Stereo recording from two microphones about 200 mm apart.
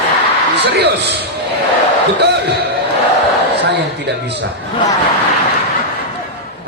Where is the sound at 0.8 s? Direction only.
55° right (ahead or behind).